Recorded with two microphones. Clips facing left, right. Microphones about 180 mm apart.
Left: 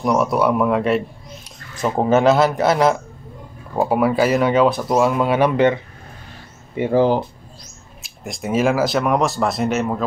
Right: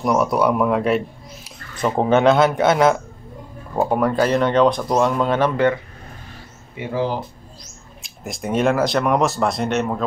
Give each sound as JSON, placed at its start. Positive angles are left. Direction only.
{"t": 0.0, "sound": "speech", "side_deg": 0}
{"t": 6.8, "sound": "speech", "side_deg": 50}
{"t": 8.0, "sound": "speech", "side_deg": 0}